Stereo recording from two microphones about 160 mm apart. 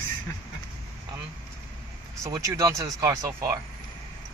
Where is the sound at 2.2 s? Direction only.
20° right (ahead or behind).